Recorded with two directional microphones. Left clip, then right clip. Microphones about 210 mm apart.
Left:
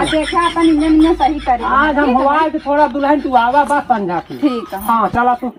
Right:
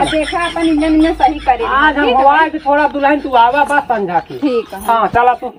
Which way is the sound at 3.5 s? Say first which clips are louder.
Even; centre (ahead or behind).